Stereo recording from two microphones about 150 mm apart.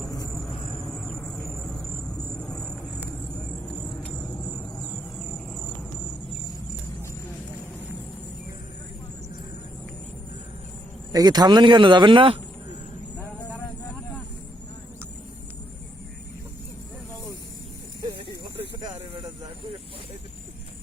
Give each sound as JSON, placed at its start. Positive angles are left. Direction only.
{"t": 0.1, "sound": "vehicle", "side_deg": 25}
{"t": 0.3, "sound": "a sound", "side_deg": 0}
{"t": 2.3, "sound": "vehicle", "side_deg": 5}
{"t": 3.8, "sound": "cricket", "side_deg": 5}
{"t": 11.1, "sound": "speech", "side_deg": -25}
{"t": 13.1, "sound": "vehicle", "side_deg": 15}
{"t": 18.8, "sound": "a sound", "side_deg": -55}